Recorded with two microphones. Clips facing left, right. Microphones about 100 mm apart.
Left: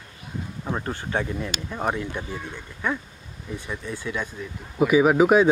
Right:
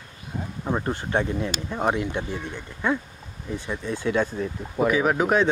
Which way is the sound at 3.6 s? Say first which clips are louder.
Right 4 dB; 20° right (ahead or behind).